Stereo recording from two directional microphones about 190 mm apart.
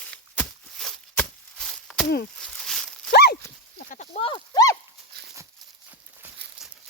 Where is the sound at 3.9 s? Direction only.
35° left (ahead or behind); by 4.7 s 20° left (ahead or behind).